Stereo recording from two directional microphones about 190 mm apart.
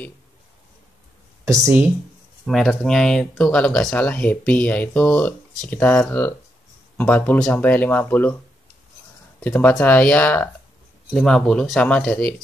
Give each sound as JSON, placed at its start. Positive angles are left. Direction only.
{"t": 1.4, "sound": "speech", "side_deg": -15}
{"t": 2.4, "sound": "speech", "side_deg": 0}
{"t": 9.4, "sound": "speech", "side_deg": 10}